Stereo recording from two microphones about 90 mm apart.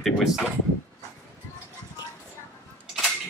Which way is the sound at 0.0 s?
5° right (ahead or behind).